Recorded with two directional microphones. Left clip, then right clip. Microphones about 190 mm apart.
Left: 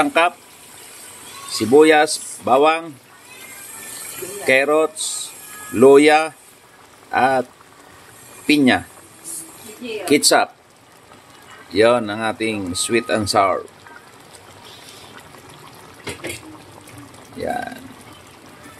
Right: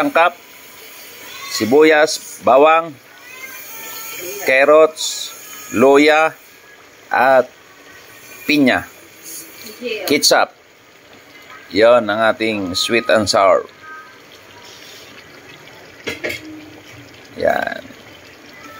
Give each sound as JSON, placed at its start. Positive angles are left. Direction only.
{"t": 0.0, "sound": "speech", "side_deg": 0}
{"t": 1.6, "sound": "speech", "side_deg": 0}
{"t": 4.5, "sound": "speech", "side_deg": 0}
{"t": 8.5, "sound": "speech", "side_deg": 0}
{"t": 10.0, "sound": "speech", "side_deg": 0}
{"t": 11.7, "sound": "speech", "side_deg": 0}
{"t": 17.4, "sound": "speech", "side_deg": -5}